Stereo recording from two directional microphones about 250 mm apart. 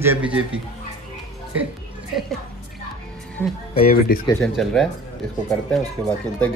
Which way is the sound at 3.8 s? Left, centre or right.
Left.